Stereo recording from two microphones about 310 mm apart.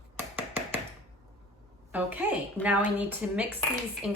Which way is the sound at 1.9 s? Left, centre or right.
Centre.